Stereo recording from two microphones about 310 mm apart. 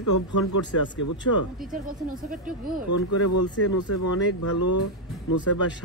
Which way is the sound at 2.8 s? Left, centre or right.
Left.